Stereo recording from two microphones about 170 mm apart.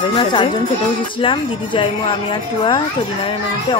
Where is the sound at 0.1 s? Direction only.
30° left (ahead or behind).